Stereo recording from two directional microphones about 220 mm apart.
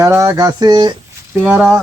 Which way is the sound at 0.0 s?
10° right (ahead or behind).